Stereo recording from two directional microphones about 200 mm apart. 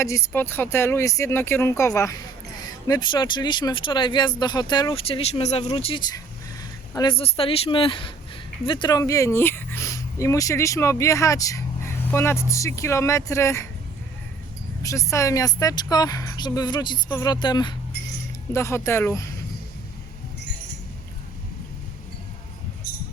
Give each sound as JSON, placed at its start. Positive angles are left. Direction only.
{"t": 0.0, "sound": "speech", "side_deg": 15}
{"t": 5.7, "sound": "speech", "side_deg": 20}
{"t": 14.8, "sound": "speech", "side_deg": 15}